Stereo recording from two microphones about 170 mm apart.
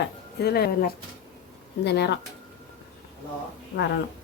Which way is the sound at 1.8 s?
80° left.